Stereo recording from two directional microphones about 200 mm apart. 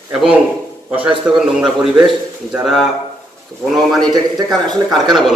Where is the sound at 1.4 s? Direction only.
5° right (ahead or behind).